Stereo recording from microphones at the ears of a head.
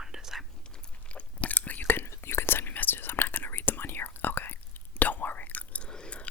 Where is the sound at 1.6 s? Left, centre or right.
Left.